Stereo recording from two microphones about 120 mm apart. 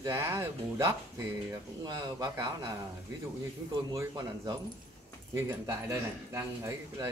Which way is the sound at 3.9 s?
25° right (ahead or behind).